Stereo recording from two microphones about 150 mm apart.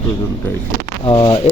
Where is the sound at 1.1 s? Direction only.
35° left (ahead or behind).